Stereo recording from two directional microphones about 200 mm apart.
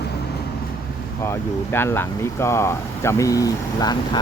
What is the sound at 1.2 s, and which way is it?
Speech, 10° left (ahead or behind).